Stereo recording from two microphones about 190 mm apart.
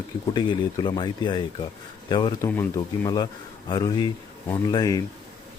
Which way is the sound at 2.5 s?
10° left (ahead or behind).